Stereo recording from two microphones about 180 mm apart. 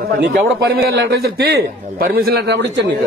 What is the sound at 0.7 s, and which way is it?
A man's voice, 60° right (ahead or behind).